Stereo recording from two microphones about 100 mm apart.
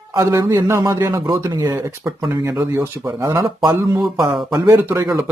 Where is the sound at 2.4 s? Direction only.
30° right (ahead or behind).